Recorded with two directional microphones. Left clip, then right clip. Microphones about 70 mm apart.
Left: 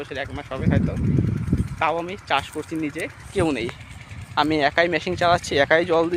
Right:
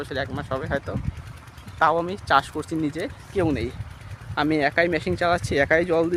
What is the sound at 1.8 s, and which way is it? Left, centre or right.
Speech, right.